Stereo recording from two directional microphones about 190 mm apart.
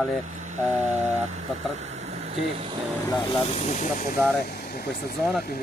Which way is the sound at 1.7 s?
35° right (ahead or behind).